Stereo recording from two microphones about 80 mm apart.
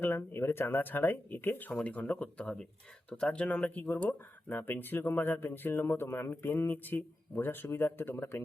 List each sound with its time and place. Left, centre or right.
0.0 s speech: left